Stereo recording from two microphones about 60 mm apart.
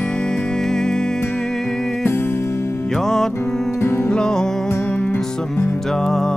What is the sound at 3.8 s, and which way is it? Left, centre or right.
Music, left.